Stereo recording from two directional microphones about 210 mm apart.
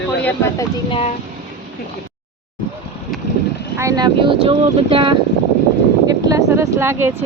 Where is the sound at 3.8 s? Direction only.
15° right (ahead or behind).